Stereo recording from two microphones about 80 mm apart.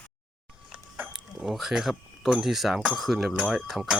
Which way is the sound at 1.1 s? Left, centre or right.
Centre.